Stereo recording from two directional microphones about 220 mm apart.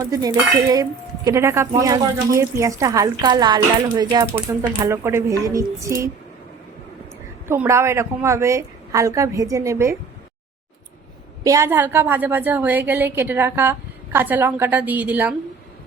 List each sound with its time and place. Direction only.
0.0 s cutlery: 15° right (ahead or behind)
7.4 s cutlery: 10° right (ahead or behind)
11.4 s cutlery: 15° right (ahead or behind)